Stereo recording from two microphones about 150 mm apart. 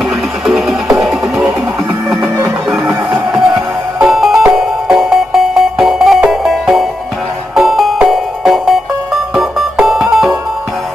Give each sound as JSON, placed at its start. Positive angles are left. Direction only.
{"t": 0.5, "sound": "music", "side_deg": 0}
{"t": 3.3, "sound": "music", "side_deg": 0}